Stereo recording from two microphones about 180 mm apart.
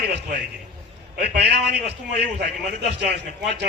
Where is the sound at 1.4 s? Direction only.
65° right (ahead or behind).